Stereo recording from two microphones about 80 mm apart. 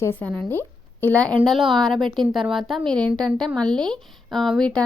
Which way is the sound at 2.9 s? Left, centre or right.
Centre.